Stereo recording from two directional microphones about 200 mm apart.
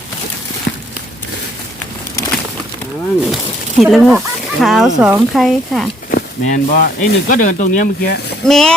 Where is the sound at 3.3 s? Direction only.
Centre (ahead or behind).